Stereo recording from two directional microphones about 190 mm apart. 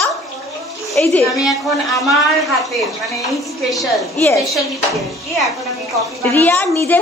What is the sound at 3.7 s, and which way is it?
Speech, centre (ahead or behind).